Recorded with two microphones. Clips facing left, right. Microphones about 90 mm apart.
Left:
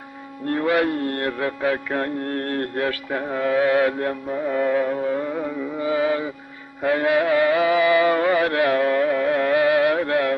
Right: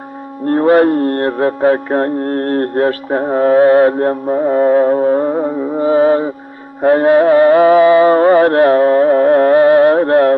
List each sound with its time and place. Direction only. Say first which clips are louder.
0.5 s mantra: right 11 dB; 40° right (ahead or behind)
6.8 s music: right 10 dB; 40° right (ahead or behind)